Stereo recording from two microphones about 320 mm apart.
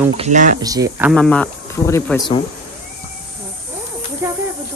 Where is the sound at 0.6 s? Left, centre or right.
Centre.